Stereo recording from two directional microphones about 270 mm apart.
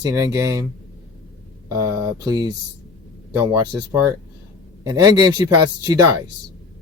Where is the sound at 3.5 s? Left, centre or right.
Centre.